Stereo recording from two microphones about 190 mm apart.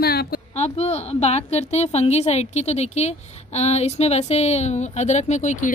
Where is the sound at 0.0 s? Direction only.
55° left (ahead or behind).